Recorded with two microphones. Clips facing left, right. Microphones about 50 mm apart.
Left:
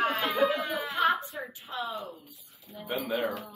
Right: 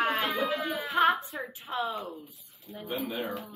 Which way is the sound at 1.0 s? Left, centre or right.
Right.